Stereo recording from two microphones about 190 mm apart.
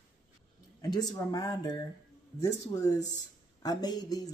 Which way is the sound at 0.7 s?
20° left (ahead or behind).